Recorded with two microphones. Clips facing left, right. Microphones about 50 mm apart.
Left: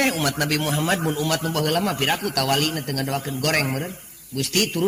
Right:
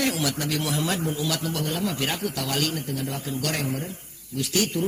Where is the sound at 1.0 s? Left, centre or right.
Left.